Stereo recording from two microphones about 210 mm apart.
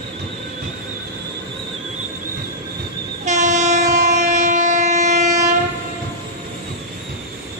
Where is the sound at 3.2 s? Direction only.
35° right (ahead or behind).